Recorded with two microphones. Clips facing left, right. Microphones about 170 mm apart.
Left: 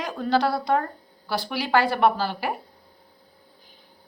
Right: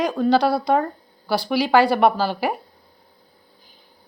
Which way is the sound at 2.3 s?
90° right.